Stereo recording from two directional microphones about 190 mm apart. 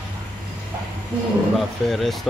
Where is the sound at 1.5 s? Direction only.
Centre (ahead or behind).